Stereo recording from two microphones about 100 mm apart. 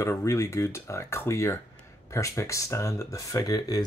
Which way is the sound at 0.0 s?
30° left (ahead or behind).